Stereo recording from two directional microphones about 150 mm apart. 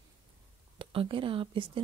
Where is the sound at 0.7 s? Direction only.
35° right (ahead or behind).